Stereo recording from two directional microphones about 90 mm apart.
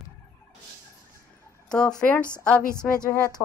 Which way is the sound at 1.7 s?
10° left (ahead or behind).